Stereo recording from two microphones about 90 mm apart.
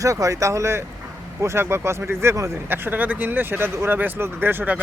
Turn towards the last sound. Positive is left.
turn(degrees=-20)  # may be behind; listen again after turning